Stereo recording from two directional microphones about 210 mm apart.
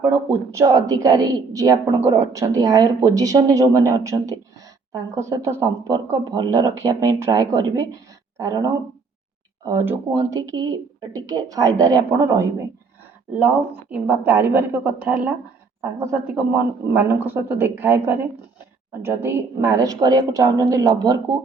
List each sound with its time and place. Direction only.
0.5 s a woman's voice: 15° right (ahead or behind)
13.9 s a woman's voice: 10° right (ahead or behind)